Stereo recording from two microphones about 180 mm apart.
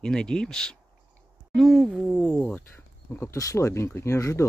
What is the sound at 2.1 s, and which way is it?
Speech, 10° left (ahead or behind).